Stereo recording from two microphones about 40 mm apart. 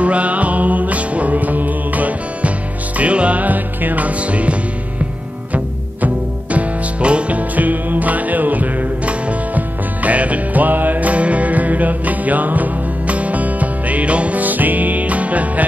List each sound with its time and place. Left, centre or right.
0.0 s music: right
6.0 s music: right